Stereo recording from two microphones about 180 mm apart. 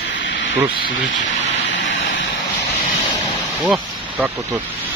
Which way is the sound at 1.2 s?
90° left.